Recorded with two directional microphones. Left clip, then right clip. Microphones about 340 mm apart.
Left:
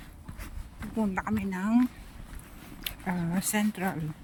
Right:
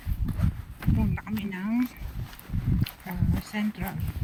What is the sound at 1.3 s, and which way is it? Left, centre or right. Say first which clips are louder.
Speech: left 2 dB; left.